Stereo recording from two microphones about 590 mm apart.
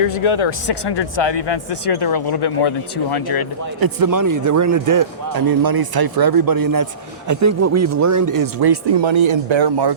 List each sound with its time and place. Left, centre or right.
0.1 s speech: left
3.8 s a man's voice: right